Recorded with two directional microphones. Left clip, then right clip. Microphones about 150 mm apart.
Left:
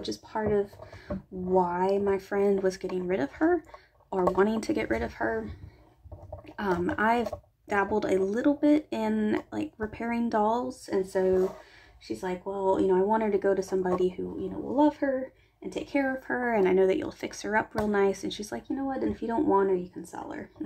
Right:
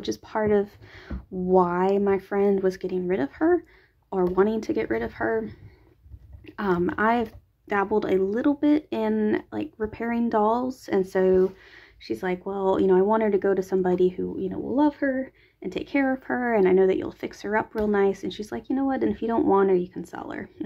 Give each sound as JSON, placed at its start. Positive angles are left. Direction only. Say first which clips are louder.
{"t": 0.0, "sound": "speech", "louder": "right 5 dB", "side_deg": -45}
{"t": 10.7, "sound": "speech", "louder": "right 4 dB", "side_deg": -45}
{"t": 18.8, "sound": "speech", "louder": "right 6 dB", "side_deg": -40}